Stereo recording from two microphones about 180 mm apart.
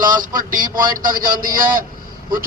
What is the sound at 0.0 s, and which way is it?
A man's voice, 50° right (ahead or behind).